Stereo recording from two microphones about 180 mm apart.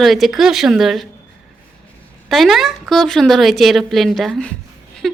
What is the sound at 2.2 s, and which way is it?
Speech, centre (ahead or behind).